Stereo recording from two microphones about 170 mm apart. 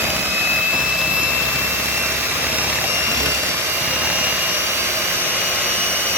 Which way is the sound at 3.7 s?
10° right (ahead or behind).